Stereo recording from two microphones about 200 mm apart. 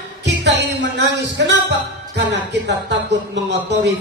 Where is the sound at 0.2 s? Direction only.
60° right (ahead or behind).